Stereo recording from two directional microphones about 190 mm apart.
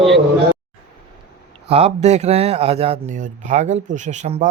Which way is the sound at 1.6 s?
30° right (ahead or behind).